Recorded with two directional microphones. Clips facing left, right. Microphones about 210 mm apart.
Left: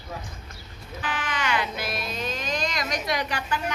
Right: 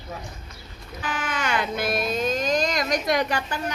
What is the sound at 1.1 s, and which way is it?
A child's voice, 45° right (ahead or behind).